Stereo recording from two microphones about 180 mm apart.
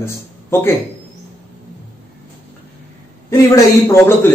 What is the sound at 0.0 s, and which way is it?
Speech, 15° left (ahead or behind).